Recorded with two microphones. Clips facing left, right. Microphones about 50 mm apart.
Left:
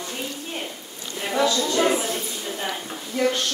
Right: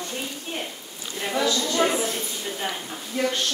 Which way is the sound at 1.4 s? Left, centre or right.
Centre.